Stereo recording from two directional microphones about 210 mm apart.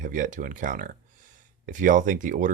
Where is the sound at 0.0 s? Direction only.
40° right (ahead or behind).